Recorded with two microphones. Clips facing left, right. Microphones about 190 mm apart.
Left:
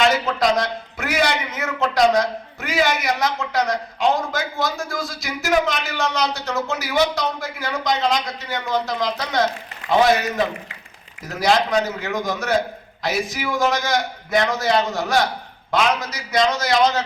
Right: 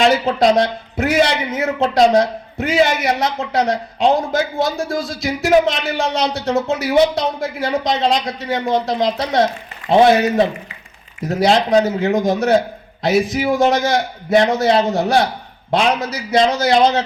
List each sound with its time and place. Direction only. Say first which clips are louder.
0.0 s a man's voice: right 5 dB; 30° right (ahead or behind)